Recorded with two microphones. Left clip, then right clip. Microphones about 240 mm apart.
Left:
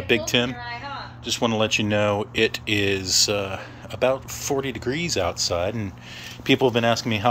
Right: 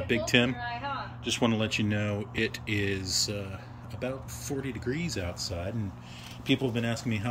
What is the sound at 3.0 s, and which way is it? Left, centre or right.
Speech, left.